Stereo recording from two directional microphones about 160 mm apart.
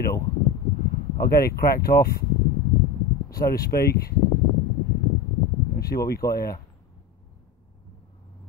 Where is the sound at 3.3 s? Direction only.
70° left (ahead or behind).